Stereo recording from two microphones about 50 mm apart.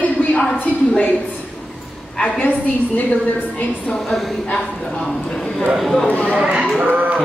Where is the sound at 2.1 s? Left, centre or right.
Centre.